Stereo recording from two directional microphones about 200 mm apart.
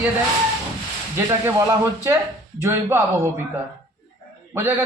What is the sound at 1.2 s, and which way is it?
Speech, 15° right (ahead or behind).